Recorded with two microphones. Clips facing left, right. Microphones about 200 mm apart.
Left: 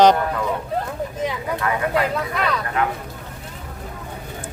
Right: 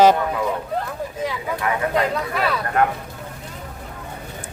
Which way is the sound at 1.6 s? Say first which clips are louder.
Even; 20° right (ahead or behind).